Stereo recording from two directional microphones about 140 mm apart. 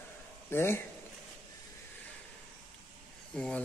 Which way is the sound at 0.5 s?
15° left (ahead or behind).